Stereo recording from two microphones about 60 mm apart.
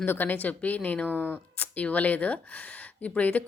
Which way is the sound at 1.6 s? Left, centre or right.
Left.